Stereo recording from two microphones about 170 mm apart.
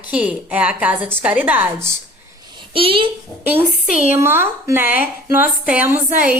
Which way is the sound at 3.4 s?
10° right (ahead or behind).